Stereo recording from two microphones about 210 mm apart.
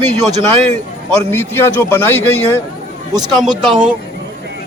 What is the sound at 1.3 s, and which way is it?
Speech, 10° left (ahead or behind).